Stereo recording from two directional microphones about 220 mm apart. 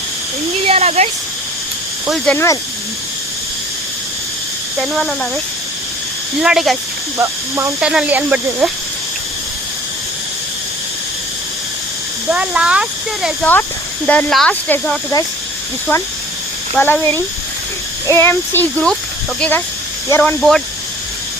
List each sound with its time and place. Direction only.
0.7 s speech: 30° right (ahead or behind)
2.0 s speech: 5° left (ahead or behind)
4.8 s speech: centre (ahead or behind)
6.4 s speech: centre (ahead or behind)
12.3 s speech: 5° right (ahead or behind)
16.7 s speech: 10° left (ahead or behind)